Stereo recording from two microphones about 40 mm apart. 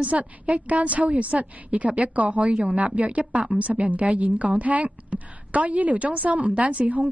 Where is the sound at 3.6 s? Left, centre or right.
Right.